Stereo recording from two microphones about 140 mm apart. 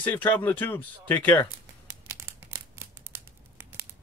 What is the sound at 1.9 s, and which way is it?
Crumpling, 20° right (ahead or behind).